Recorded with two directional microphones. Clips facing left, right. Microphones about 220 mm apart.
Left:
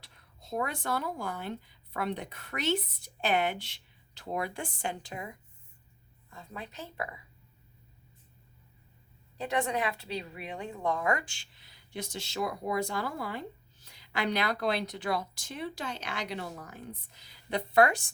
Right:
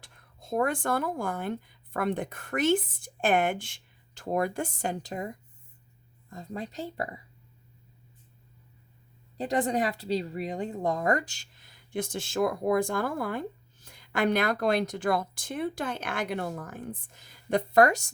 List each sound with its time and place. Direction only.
0.0 s speech: 50° right (ahead or behind)
9.4 s speech: 35° right (ahead or behind)